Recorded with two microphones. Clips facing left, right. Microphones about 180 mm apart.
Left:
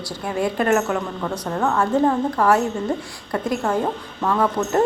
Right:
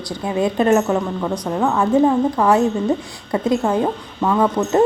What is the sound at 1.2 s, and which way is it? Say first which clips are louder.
A woman's voice: right 3 dB; 10° right (ahead or behind).